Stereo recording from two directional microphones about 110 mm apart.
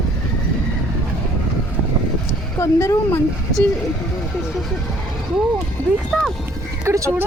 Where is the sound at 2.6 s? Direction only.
25° left (ahead or behind).